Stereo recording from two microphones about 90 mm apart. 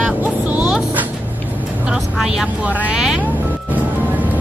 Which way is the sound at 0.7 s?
10° right (ahead or behind).